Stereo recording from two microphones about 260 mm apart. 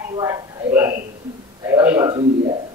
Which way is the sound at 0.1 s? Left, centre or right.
Centre.